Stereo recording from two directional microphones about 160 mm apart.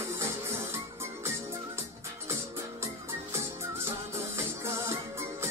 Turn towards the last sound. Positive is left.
turn(degrees=-15)  # may be behind; listen again after turning